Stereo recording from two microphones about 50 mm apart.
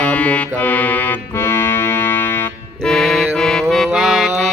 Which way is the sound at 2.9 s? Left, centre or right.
Centre.